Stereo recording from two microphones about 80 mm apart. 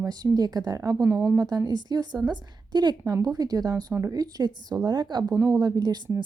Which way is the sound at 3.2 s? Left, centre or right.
Right.